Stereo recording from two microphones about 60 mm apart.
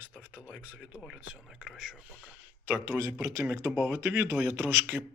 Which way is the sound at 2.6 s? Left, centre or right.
Right.